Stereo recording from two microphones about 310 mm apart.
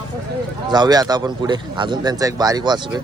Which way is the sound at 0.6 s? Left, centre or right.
Centre.